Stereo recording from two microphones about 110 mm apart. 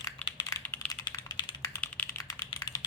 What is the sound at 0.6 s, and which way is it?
Typing, 20° left (ahead or behind).